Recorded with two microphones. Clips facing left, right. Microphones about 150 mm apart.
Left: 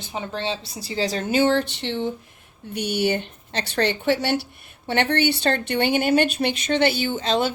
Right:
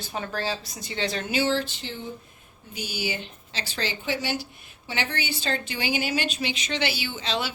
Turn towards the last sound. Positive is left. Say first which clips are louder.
# left 8 dB
turn(degrees=45)  # may be behind; listen again after turning